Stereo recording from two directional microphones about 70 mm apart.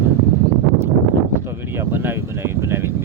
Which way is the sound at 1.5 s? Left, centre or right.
Right.